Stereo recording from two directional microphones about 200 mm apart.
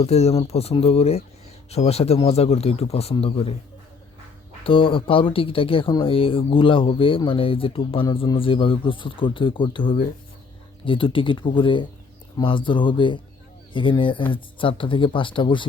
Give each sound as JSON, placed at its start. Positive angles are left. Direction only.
{"t": 0.0, "sound": "speech", "side_deg": 30}
{"t": 4.6, "sound": "speech", "side_deg": 25}